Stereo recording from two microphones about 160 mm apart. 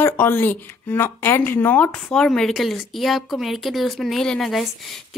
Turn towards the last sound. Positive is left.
turn(degrees=0)  # may be behind; listen again after turning